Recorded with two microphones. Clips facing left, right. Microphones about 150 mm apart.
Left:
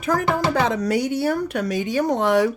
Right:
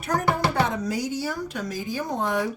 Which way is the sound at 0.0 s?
90° left.